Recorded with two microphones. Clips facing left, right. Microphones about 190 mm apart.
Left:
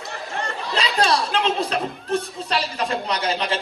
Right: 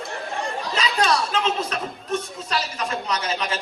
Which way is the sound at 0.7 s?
30° left (ahead or behind).